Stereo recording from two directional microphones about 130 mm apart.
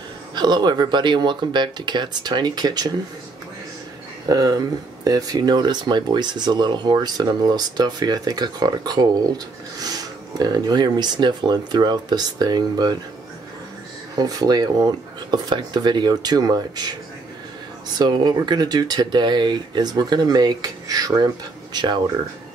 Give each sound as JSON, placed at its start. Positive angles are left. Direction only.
{"t": 0.3, "sound": "speech", "side_deg": -35}
{"t": 4.3, "sound": "speech", "side_deg": -30}
{"t": 14.2, "sound": "speech", "side_deg": -30}
{"t": 17.9, "sound": "speech", "side_deg": -30}